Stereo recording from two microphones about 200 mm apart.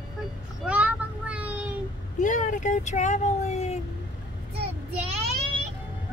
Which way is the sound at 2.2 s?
40° left (ahead or behind).